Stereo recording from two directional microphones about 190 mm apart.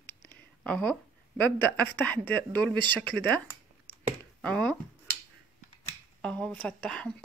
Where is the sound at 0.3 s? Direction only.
5° left (ahead or behind).